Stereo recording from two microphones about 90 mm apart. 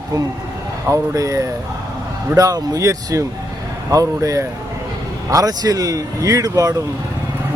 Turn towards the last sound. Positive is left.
turn(degrees=-40)  # may be behind; listen again after turning